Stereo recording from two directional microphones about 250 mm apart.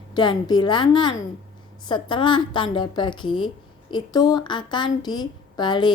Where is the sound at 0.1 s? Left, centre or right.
Centre.